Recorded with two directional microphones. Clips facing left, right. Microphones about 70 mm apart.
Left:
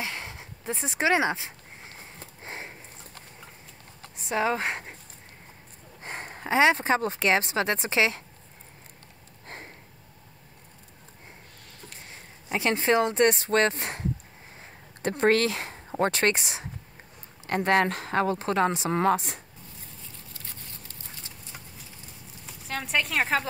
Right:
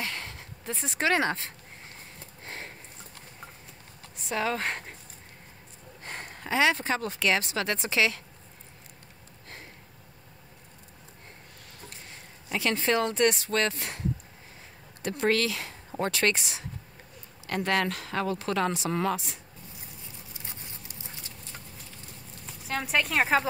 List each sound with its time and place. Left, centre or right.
0.0 s a sound: centre
2.1 s sniff: centre
4.2 s speech: left
6.0 s speech: left
12.4 s speech: left
20.3 s insect: centre
22.5 s speech: centre